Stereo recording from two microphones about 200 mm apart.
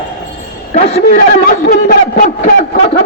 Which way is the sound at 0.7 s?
40° left (ahead or behind).